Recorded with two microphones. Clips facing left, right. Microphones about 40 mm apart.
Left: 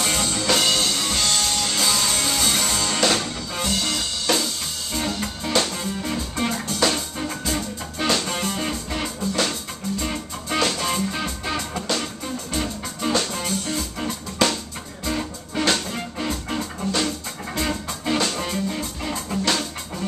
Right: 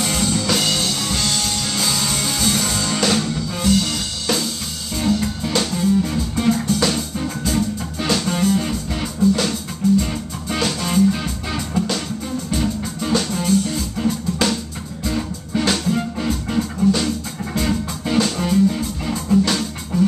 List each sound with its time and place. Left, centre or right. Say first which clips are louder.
0.0 s music: right 3 dB; centre